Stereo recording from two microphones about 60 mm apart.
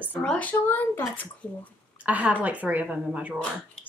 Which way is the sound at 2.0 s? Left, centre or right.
Right.